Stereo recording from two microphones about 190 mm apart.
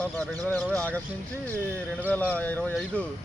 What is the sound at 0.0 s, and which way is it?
Speech, 5° left (ahead or behind).